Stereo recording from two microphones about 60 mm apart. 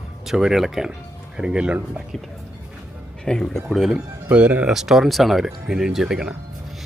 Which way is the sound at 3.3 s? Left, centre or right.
Centre.